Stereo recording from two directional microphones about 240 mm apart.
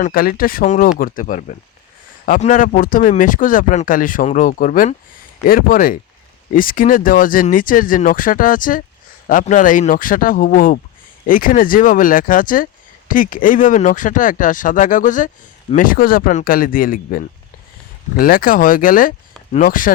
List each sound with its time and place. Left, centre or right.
0.0 s speech: left